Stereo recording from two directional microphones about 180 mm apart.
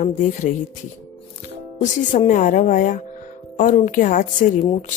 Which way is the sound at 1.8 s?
45° left (ahead or behind).